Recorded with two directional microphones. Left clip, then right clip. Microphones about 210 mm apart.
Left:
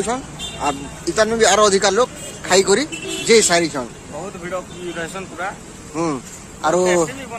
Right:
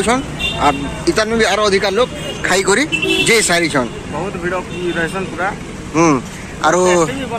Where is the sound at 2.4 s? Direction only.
Centre (ahead or behind).